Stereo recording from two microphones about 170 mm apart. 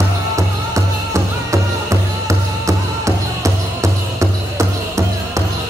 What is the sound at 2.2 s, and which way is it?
Music, 20° right (ahead or behind).